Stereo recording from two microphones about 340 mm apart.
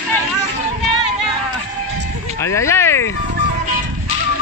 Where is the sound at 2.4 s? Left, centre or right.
Centre.